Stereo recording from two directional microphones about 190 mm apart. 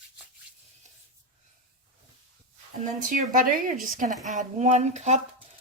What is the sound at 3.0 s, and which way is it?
Speech, 45° right (ahead or behind).